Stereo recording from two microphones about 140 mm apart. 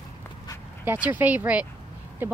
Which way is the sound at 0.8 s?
15° right (ahead or behind).